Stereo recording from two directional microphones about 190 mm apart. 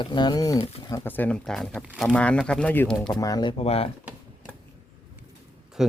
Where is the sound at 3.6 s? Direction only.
30° left (ahead or behind).